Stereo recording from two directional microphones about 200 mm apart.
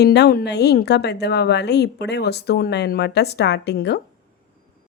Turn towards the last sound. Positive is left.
turn(degrees=55)  # may be behind; listen again after turning